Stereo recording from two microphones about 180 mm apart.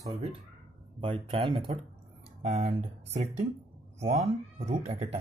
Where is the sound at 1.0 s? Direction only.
30° right (ahead or behind).